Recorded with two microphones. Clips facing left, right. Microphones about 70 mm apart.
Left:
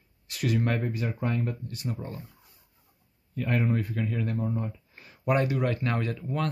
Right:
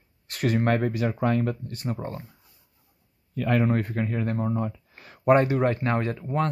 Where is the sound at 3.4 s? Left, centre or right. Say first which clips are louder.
Right 5 dB; right.